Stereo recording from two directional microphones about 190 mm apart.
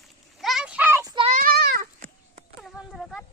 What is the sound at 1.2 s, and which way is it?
Goat, 45° right (ahead or behind).